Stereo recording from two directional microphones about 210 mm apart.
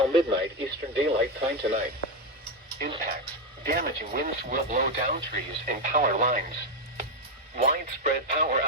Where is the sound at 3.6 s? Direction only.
45° right (ahead or behind).